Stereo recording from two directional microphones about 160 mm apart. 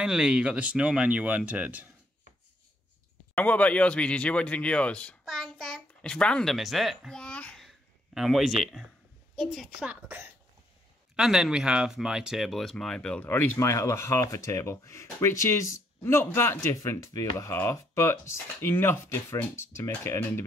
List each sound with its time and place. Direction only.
0.0 s speech: 5° right (ahead or behind)
3.3 s a woman's voice: 10° left (ahead or behind); by 10.3 s 15° right (ahead or behind)
11.1 s speech: centre (ahead or behind); by 20.4 s 15° left (ahead or behind)